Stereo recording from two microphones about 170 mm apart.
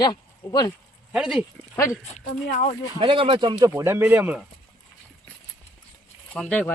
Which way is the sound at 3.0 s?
30° right (ahead or behind).